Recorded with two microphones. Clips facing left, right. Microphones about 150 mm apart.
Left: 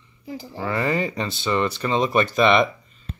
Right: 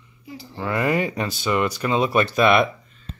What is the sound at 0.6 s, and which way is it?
Speech, 10° right (ahead or behind).